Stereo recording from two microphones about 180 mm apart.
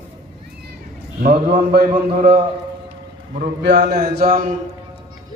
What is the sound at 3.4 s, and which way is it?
A man's voice, 65° right (ahead or behind).